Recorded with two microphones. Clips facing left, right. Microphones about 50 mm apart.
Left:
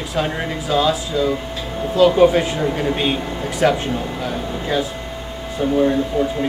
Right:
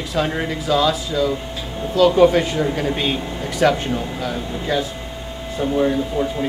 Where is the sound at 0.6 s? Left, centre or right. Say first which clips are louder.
Even; left.